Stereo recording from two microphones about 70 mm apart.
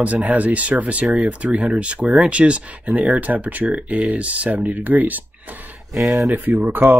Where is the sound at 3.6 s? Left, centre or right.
Centre.